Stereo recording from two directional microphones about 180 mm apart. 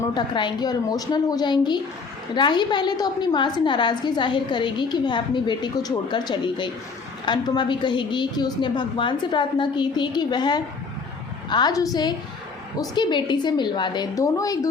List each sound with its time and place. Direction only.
0.1 s a woman's voice: 25° left (ahead or behind)